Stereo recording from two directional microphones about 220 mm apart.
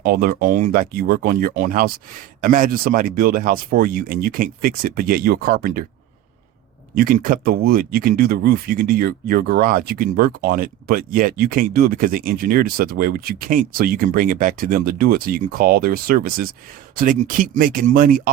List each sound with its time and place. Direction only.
0.0 s speech: 45° right (ahead or behind)
6.9 s speech: 40° right (ahead or behind)